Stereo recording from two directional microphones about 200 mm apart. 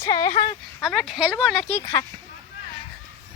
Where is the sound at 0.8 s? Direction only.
Centre (ahead or behind).